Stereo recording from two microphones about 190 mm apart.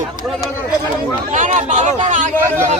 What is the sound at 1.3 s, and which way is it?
Speech, 40° right (ahead or behind).